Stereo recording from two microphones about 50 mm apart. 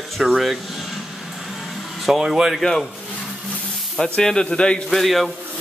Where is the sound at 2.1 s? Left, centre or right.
Centre.